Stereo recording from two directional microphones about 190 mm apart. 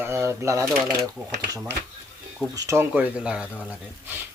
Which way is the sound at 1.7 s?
60° right (ahead or behind).